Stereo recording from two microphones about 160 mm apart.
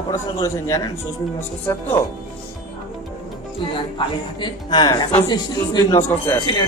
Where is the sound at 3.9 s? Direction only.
30° left (ahead or behind).